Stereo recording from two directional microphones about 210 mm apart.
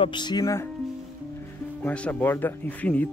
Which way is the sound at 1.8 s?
5° left (ahead or behind).